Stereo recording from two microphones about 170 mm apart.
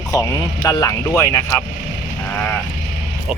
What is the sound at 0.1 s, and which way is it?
Speech, 20° left (ahead or behind).